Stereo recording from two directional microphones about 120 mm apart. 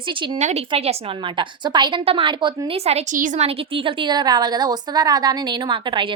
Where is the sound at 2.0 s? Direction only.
50° right (ahead or behind).